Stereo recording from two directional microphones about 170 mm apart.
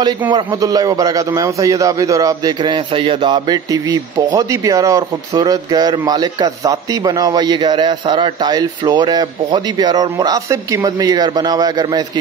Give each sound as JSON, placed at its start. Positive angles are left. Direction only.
{"t": 0.3, "sound": "a man's voice", "side_deg": -20}